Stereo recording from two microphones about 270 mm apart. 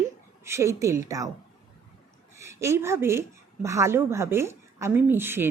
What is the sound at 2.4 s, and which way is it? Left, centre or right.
A woman's voice, centre.